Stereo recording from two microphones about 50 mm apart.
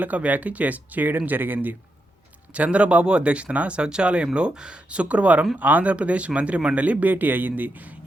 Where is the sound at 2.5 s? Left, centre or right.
Right.